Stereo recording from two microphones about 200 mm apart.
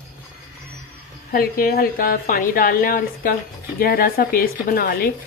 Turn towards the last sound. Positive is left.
turn(degrees=50)  # may be behind; listen again after turning